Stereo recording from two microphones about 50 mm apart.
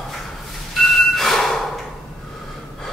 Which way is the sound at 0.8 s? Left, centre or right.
Centre.